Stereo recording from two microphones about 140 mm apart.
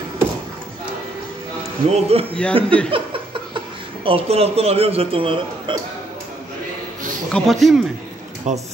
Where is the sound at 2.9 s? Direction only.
40° right (ahead or behind).